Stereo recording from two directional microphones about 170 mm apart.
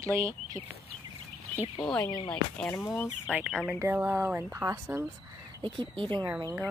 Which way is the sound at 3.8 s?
15° right (ahead or behind).